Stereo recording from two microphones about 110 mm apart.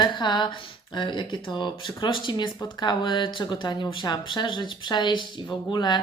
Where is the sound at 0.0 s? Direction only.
45° left (ahead or behind).